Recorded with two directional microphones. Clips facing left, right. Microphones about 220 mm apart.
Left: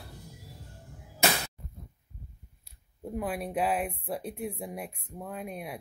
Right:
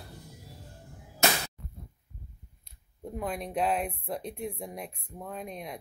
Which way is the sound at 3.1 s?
5° left (ahead or behind).